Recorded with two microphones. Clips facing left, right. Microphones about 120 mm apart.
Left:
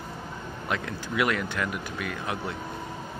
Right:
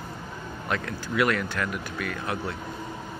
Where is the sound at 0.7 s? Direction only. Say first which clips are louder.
Right 1 dB; 15° left (ahead or behind).